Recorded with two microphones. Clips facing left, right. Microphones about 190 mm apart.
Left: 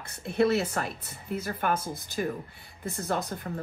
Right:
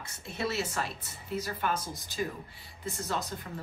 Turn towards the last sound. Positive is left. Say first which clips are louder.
# left 4 dB
turn(degrees=55)  # may be behind; listen again after turning